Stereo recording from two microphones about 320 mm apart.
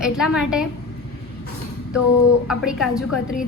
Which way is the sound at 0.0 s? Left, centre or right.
Centre.